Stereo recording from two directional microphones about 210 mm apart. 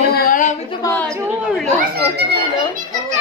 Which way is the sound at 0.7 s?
15° left (ahead or behind).